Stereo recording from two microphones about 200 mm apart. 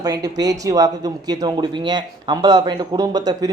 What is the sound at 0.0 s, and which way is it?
Speech, 20° right (ahead or behind).